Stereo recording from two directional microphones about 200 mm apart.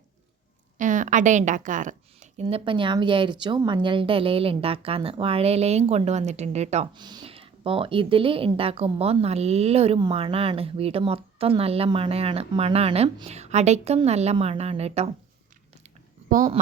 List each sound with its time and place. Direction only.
0.8 s a woman's voice: 40° right (ahead or behind)
2.5 s speech: 25° right (ahead or behind)
6.9 s speech: 20° right (ahead or behind)
16.3 s speech: 40° right (ahead or behind)